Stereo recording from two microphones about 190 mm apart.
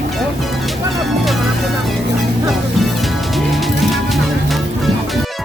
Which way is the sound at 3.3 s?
Centre (ahead or behind).